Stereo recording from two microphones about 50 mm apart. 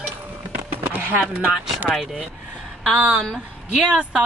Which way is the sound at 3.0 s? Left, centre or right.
Centre.